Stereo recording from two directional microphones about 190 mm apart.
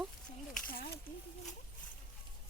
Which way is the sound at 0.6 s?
50° left (ahead or behind).